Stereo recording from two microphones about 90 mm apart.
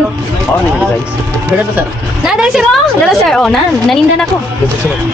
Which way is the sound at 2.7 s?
5° left (ahead or behind).